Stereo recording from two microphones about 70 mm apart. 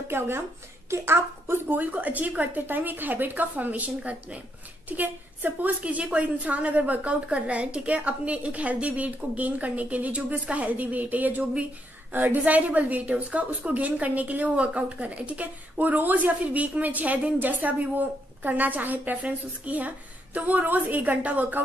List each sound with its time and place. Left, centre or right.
0.1 s a woman's voice: right